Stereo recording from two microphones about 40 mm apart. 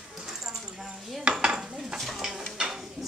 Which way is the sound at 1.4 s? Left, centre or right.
Centre.